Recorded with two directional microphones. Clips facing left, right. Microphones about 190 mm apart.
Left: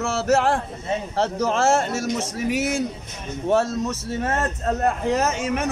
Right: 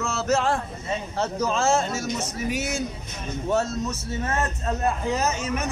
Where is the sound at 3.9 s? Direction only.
65° left (ahead or behind).